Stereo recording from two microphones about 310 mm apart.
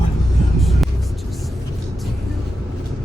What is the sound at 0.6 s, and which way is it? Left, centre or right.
Vehicle, centre.